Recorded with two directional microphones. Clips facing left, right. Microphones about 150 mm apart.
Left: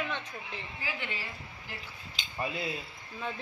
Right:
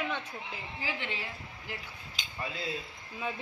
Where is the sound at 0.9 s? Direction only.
25° right (ahead or behind).